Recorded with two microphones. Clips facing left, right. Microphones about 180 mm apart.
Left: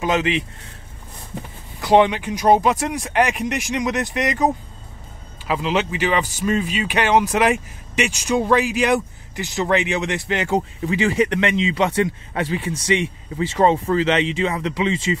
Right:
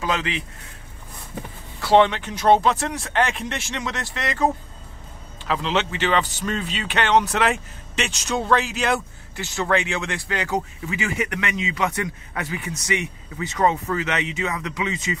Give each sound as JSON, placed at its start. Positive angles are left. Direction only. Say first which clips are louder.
{"t": 0.0, "sound": "speech", "louder": "left 5 dB", "side_deg": 20}
{"t": 1.8, "sound": "speech", "louder": "left 2 dB", "side_deg": 15}
{"t": 5.5, "sound": "speech", "louder": "left 2 dB", "side_deg": 10}